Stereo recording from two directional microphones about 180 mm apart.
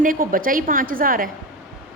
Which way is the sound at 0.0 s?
50° right (ahead or behind).